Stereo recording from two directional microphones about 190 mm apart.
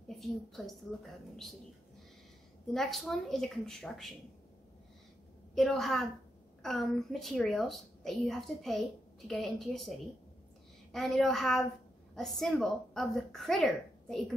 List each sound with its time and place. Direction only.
0.2 s a woman's voice: centre (ahead or behind)
2.7 s a woman's voice: centre (ahead or behind)
5.5 s a woman's voice: centre (ahead or behind)